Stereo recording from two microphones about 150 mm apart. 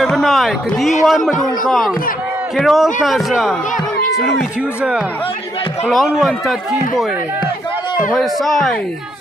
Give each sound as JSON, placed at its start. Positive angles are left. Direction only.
{"t": 0.0, "sound": "a man's voice", "side_deg": 0}
{"t": 8.1, "sound": "a man's voice", "side_deg": 0}